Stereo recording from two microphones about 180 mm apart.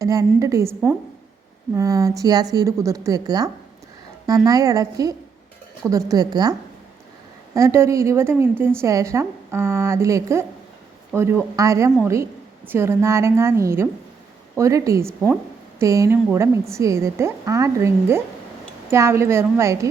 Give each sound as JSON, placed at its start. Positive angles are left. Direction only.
{"t": 0.0, "sound": "a woman's voice", "side_deg": -20}